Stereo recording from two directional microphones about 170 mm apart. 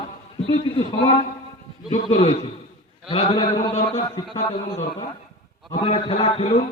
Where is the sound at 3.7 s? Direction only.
45° left (ahead or behind).